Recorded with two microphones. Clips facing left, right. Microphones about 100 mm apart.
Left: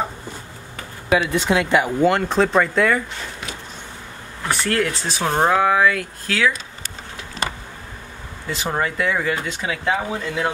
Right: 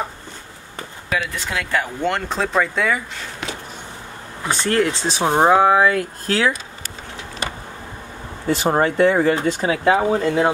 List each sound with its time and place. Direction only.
1.3 s speech: 20° left (ahead or behind)
2.0 s speech: centre (ahead or behind)
4.5 s speech: 25° right (ahead or behind)
5.2 s speech: 20° right (ahead or behind)
8.6 s speech: 35° right (ahead or behind)